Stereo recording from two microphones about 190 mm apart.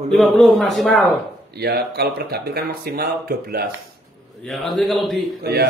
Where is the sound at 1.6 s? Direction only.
55° right (ahead or behind).